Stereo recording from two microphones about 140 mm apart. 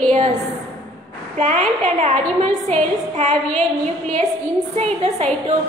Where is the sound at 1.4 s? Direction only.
55° right (ahead or behind).